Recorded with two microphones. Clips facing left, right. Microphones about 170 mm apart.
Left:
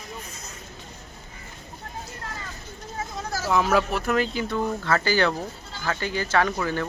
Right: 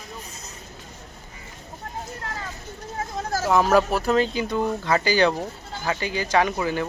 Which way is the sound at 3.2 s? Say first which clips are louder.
Right 3 dB; 45° right (ahead or behind).